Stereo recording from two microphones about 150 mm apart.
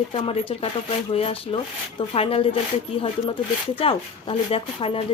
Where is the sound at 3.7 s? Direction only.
40° left (ahead or behind).